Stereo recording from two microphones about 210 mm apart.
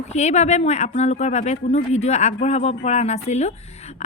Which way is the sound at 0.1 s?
30° left (ahead or behind).